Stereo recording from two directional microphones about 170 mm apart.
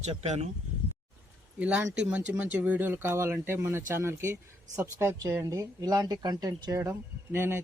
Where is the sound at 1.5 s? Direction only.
10° right (ahead or behind).